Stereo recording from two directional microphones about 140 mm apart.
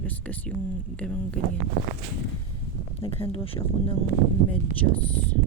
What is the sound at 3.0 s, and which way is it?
Speech, 45° left (ahead or behind).